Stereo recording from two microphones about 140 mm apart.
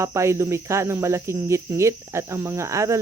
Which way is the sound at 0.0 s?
20° right (ahead or behind).